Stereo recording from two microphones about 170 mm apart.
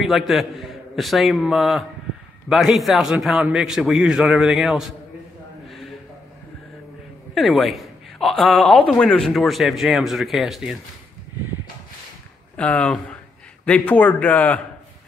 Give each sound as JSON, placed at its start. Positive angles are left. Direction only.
{"t": 0.0, "sound": "a man's voice", "side_deg": 0}
{"t": 7.3, "sound": "a man's voice", "side_deg": 0}
{"t": 12.5, "sound": "a man's voice", "side_deg": 5}